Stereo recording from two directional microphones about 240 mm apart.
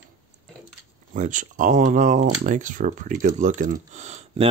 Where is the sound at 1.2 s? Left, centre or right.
Right.